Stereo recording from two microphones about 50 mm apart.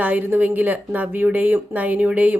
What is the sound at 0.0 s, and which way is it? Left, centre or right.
Speech, right.